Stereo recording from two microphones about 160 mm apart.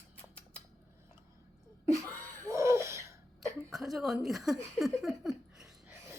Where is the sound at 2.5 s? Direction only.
20° right (ahead or behind).